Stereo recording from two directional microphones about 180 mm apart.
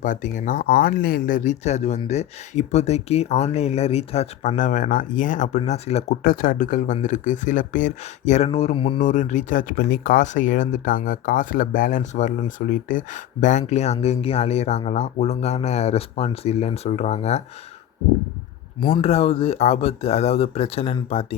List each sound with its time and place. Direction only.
0.0 s speech: 45° left (ahead or behind)
6.2 s speech: 50° left (ahead or behind)
8.4 s speech: 30° left (ahead or behind)
9.0 s speech: 45° left (ahead or behind)
18.8 s speech: 25° left (ahead or behind)